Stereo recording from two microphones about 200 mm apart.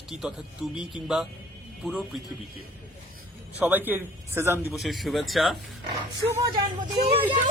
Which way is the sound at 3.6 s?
10° right (ahead or behind).